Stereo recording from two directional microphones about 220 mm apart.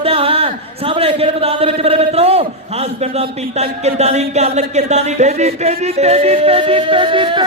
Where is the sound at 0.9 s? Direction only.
25° right (ahead or behind).